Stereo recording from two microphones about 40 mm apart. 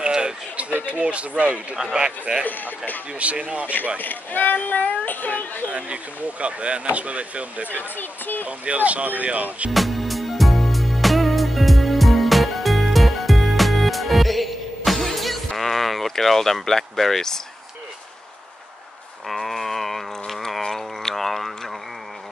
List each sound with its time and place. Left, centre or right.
0.0 s chatter: right
0.8 s speech: right
2.0 s speech: right
2.4 s speech: left
3.2 s speech: right
4.0 s speech: left
5.7 s speech: right
7.9 s speech: left
8.5 s speech: right
9.7 s music: centre
19.2 s a sound: centre